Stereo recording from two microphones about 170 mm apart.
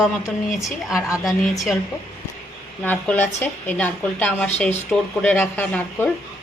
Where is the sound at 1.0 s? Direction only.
20° left (ahead or behind).